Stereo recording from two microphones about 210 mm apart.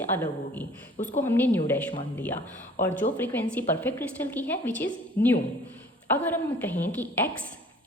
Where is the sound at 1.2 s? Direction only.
10° left (ahead or behind).